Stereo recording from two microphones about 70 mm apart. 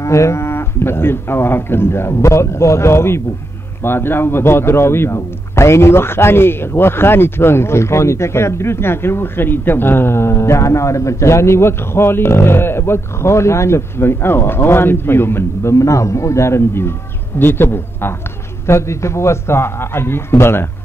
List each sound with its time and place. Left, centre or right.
0.0 s speech: left